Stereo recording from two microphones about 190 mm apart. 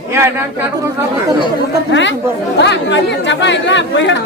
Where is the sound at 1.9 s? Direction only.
70° left (ahead or behind).